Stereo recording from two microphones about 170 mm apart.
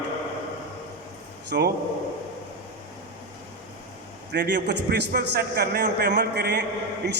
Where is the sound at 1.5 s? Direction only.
65° right (ahead or behind).